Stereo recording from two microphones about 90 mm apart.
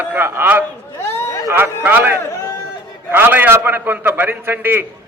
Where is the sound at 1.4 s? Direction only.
25° right (ahead or behind).